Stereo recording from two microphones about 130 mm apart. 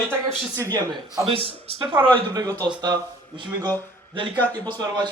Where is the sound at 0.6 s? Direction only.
25° right (ahead or behind).